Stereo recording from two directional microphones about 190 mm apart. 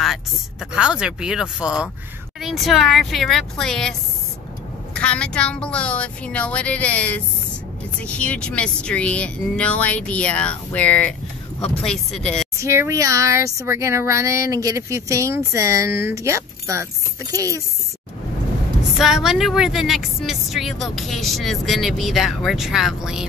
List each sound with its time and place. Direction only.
0.0 s a woman's voice: centre (ahead or behind)
4.9 s a woman's voice: 5° left (ahead or behind)
12.5 s speech: 15° right (ahead or behind)
18.8 s a woman's voice: centre (ahead or behind)